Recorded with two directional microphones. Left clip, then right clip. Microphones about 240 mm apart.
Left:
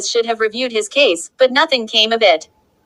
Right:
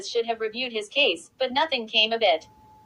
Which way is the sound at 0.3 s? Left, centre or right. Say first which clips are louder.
Left 10 dB; left.